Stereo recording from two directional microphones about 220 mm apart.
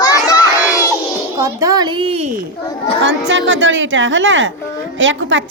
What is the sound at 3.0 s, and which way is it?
A woman's voice, 55° right (ahead or behind).